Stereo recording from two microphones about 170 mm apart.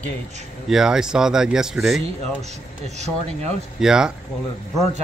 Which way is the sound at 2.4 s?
40° right (ahead or behind).